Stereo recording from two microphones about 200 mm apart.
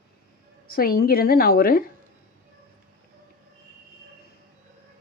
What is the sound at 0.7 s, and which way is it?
Speech, 50° left (ahead or behind).